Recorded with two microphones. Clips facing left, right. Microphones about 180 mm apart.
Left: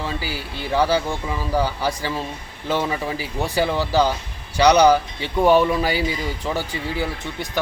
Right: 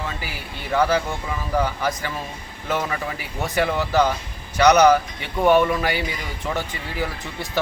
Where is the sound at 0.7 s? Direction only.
30° left (ahead or behind).